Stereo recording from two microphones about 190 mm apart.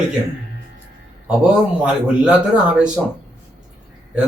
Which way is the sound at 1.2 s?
5° right (ahead or behind).